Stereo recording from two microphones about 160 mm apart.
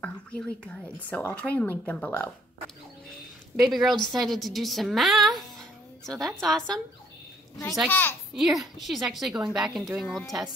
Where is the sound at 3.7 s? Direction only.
Centre (ahead or behind).